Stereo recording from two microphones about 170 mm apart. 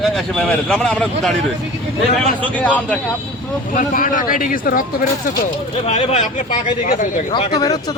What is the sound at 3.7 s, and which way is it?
Speech, 50° left (ahead or behind).